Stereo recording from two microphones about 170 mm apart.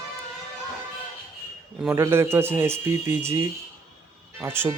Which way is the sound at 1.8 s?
15° right (ahead or behind).